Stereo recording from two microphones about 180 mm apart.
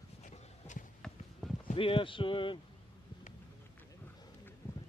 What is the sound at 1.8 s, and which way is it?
Speech, 30° left (ahead or behind).